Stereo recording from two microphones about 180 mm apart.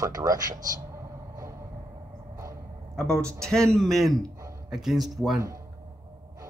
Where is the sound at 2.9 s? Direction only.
5° left (ahead or behind).